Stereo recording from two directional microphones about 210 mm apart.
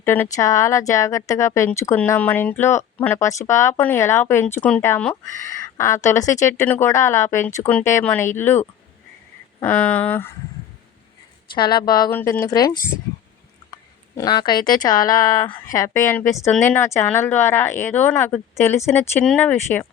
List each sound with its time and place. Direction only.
0.0 s a woman's voice: 10° left (ahead or behind)
9.6 s a woman's voice: 5° left (ahead or behind)
11.5 s a woman's voice: 20° left (ahead or behind)
14.2 s a woman's voice: 20° left (ahead or behind)